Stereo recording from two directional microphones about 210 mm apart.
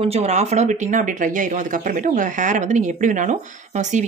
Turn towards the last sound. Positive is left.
turn(degrees=-35)  # may be behind; listen again after turning